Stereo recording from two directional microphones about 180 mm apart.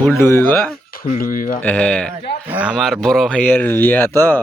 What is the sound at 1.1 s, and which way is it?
Speech, 50° left (ahead or behind).